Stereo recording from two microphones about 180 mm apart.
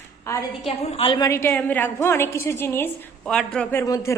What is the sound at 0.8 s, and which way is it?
Speech, 30° left (ahead or behind).